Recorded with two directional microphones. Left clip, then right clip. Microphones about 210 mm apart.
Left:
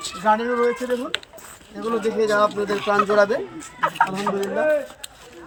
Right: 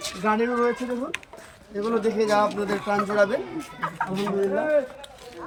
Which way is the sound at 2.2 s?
5° right (ahead or behind).